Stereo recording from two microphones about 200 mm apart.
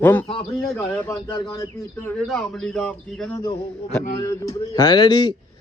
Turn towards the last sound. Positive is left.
turn(degrees=20)  # may be behind; listen again after turning